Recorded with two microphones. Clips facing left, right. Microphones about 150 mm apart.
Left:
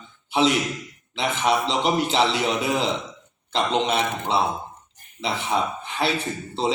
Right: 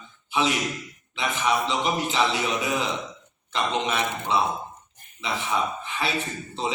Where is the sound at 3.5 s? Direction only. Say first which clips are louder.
Left 4 dB; 25° left (ahead or behind).